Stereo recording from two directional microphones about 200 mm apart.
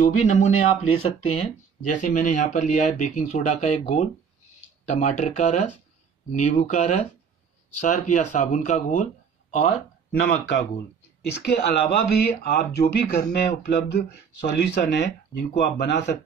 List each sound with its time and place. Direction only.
0.0 s speech: 35° left (ahead or behind)
2.0 s speech: 40° left (ahead or behind)
11.4 s speech: 55° left (ahead or behind)